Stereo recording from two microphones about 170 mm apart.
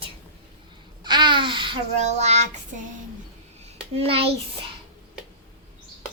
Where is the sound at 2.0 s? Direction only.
40° right (ahead or behind).